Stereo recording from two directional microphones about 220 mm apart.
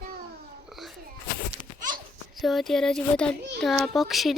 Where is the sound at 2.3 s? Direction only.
Centre (ahead or behind).